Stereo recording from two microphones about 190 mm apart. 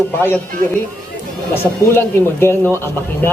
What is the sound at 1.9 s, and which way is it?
Speech, 10° left (ahead or behind).